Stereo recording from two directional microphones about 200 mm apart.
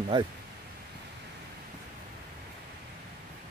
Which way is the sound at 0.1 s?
25° right (ahead or behind).